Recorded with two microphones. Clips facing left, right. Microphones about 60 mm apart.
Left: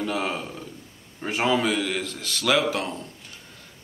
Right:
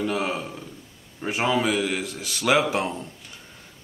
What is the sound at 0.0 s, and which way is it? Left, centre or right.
Speech, centre.